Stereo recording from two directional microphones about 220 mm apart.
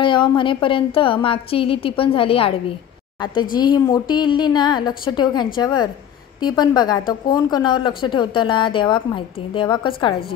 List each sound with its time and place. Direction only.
0.0 s a woman's voice: 20° left (ahead or behind)
3.5 s speech: 20° left (ahead or behind)